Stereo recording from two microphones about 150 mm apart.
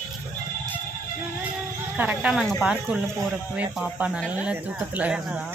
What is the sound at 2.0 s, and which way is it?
Speech, 10° right (ahead or behind).